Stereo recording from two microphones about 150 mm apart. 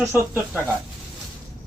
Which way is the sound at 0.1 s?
15° right (ahead or behind).